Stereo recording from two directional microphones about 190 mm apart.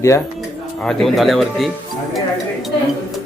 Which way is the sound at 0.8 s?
Centre (ahead or behind).